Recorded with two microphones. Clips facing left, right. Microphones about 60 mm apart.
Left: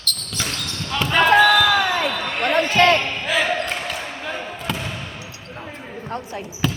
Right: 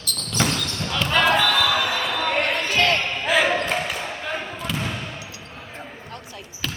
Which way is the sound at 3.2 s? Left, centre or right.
Centre.